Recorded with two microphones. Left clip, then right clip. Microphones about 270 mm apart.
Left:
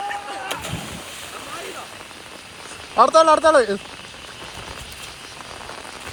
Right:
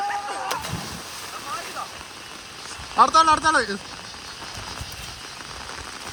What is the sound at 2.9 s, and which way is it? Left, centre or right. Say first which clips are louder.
Speech: left 3 dB; centre.